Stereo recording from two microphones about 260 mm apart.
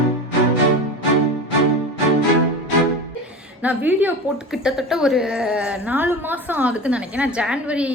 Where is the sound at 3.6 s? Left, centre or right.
Centre.